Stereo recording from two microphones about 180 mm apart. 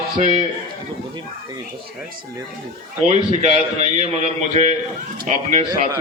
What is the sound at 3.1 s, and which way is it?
A man's voice, 40° right (ahead or behind).